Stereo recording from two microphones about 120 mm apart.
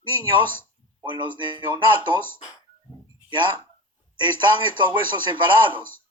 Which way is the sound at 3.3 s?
40° right (ahead or behind).